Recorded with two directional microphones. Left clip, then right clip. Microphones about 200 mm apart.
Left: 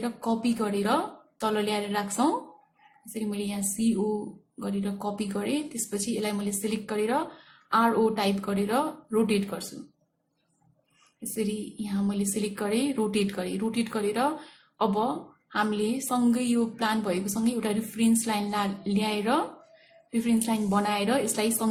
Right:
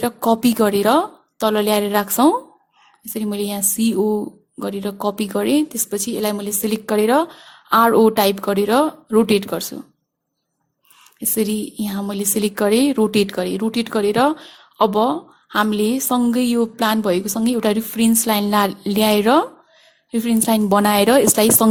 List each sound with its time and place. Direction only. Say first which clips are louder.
0.0 s a woman's voice: right 12 dB; 50° right (ahead or behind)
11.3 s a woman's voice: right 10 dB; 50° right (ahead or behind)